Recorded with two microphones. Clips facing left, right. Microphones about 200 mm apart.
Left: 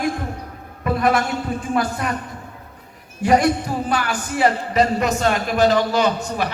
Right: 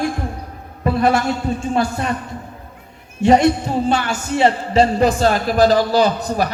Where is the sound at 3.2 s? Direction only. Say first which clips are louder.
Right 4 dB; 25° right (ahead or behind).